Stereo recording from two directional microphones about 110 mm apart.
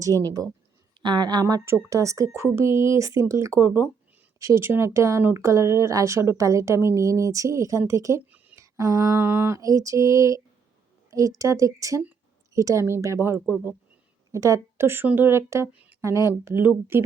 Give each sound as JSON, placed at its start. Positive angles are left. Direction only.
{"t": 0.1, "sound": "speech", "side_deg": 25}
{"t": 1.0, "sound": "a woman's voice", "side_deg": -40}
{"t": 8.5, "sound": "a sound", "side_deg": -30}
{"t": 9.1, "sound": "speech", "side_deg": -20}